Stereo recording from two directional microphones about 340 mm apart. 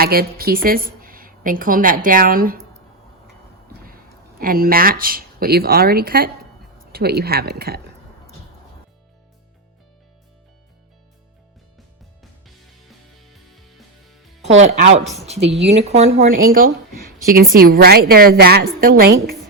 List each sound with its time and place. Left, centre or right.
0.0 s a woman's voice: right
3.8 s a woman's voice: right
13.1 s music: centre
14.5 s speech: right
15.0 s a woman's voice: centre
15.5 s a woman's voice: centre